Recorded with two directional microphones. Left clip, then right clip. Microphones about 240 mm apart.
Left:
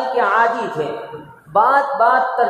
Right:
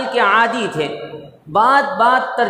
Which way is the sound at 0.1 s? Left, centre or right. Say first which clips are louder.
Right 2 dB; right.